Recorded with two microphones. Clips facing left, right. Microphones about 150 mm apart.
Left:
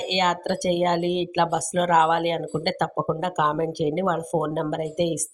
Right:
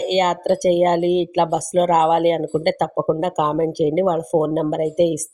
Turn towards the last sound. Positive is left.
turn(degrees=-45)  # may be behind; listen again after turning